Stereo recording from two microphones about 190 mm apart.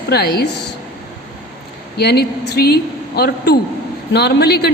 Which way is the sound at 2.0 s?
60° left (ahead or behind).